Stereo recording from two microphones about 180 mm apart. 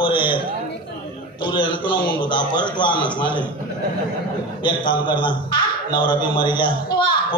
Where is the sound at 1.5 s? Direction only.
25° left (ahead or behind).